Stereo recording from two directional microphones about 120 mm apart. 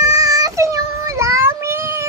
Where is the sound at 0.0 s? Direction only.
30° right (ahead or behind).